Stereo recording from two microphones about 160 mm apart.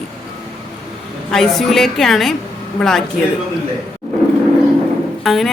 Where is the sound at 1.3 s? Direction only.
Centre (ahead or behind).